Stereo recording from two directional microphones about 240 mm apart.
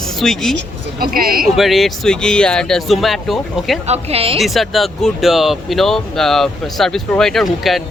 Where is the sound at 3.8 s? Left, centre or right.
Right.